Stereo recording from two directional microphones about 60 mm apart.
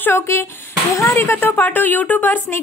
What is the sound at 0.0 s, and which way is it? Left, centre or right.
A woman's voice, left.